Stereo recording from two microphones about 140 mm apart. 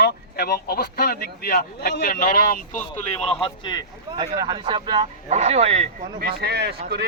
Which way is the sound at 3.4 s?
30° left (ahead or behind).